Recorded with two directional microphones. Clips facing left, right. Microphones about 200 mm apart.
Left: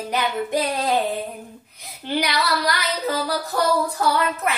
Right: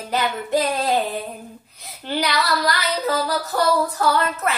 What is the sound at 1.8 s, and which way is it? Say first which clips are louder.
Female singing: even; 15° left (ahead or behind).